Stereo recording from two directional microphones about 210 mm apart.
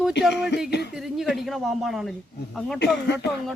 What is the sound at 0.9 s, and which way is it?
Speech, centre (ahead or behind).